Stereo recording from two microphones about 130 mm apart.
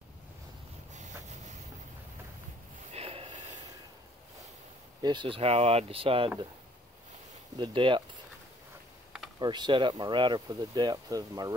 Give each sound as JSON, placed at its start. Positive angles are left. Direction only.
{"t": 2.9, "sound": "snort", "side_deg": -50}
{"t": 5.0, "sound": "speech", "side_deg": -35}
{"t": 7.5, "sound": "speech", "side_deg": -40}
{"t": 9.4, "sound": "speech", "side_deg": -35}